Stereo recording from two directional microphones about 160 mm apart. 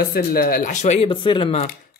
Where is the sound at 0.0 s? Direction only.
70° left (ahead or behind); by 1.7 s 35° left (ahead or behind).